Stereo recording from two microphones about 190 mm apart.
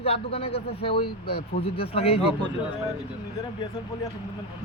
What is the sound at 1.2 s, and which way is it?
Speech, 60° left (ahead or behind).